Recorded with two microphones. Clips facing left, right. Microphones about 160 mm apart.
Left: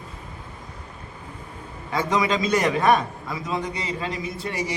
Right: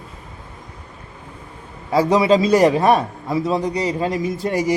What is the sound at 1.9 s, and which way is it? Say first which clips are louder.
A man's voice: right 8 dB; 35° right (ahead or behind).